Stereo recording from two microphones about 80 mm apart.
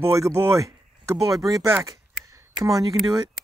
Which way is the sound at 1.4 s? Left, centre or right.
Right.